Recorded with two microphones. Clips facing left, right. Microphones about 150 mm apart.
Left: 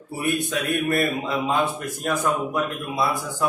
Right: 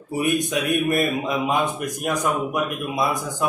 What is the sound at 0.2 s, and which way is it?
A man's voice, 15° right (ahead or behind).